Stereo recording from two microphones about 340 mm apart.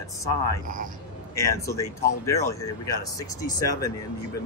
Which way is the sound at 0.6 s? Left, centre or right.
Right.